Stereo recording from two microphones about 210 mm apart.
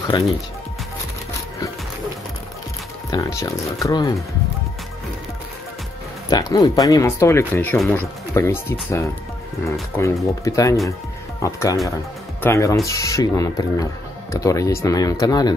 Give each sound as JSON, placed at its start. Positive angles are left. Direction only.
{"t": 0.1, "sound": "speech", "side_deg": 20}
{"t": 3.1, "sound": "speech", "side_deg": 15}
{"t": 6.3, "sound": "speech", "side_deg": 20}